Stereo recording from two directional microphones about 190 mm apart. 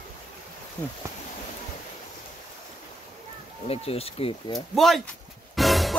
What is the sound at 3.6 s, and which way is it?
Speech, 30° left (ahead or behind).